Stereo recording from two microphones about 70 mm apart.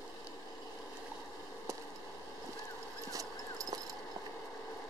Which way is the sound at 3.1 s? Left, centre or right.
Right.